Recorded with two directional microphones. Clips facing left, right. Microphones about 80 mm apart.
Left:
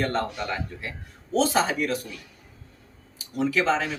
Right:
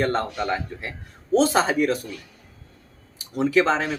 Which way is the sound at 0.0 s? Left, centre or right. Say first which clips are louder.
Right 3 dB; right.